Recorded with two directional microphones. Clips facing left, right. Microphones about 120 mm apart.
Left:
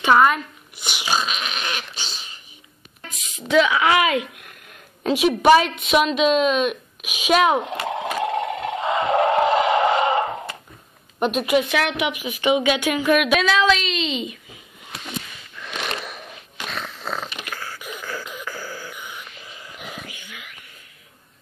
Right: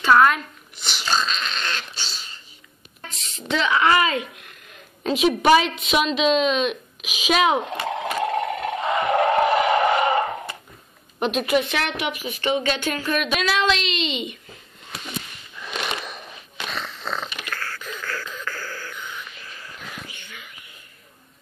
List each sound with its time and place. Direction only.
0.2 s speech: 5° left (ahead or behind)
5.6 s a woman's voice: 50° left (ahead or behind)
8.2 s a sound: 20° left (ahead or behind)
11.1 s a woman's voice: centre (ahead or behind)
15.6 s a sound: centre (ahead or behind); by 20.0 s 20° left (ahead or behind)
20.1 s whispering: 10° left (ahead or behind)